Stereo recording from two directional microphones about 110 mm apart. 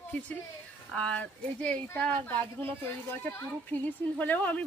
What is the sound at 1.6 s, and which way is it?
Speech, 10° left (ahead or behind).